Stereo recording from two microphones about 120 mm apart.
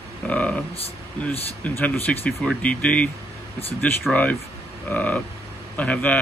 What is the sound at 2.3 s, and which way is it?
Speech, 5° left (ahead or behind).